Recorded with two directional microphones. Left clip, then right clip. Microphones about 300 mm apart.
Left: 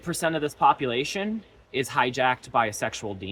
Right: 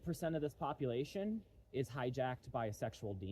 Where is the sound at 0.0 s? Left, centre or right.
Centre.